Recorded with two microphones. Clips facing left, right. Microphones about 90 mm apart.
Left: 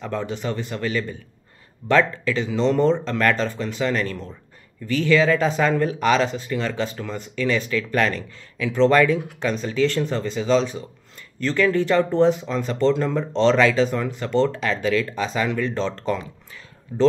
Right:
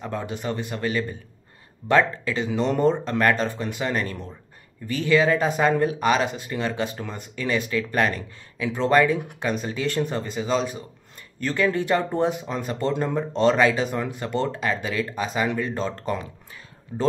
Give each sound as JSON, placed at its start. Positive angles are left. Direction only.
{"t": 0.0, "sound": "speech", "side_deg": -15}